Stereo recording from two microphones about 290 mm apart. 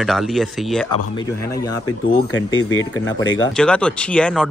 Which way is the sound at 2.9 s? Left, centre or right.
Left.